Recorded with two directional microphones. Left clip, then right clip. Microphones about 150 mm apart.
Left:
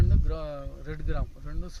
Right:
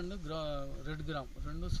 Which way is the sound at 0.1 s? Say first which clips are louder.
Left 3 dB; 25° left (ahead or behind).